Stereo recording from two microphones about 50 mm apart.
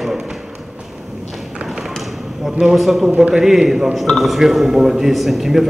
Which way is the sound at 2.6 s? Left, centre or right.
Centre.